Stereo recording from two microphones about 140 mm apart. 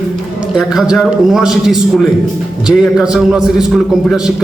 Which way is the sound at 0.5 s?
5° right (ahead or behind).